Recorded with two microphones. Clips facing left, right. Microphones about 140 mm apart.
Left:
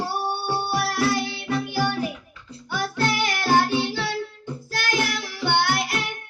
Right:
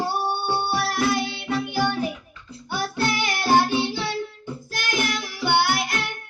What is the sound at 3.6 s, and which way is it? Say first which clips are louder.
Child singing: even; 25° right (ahead or behind).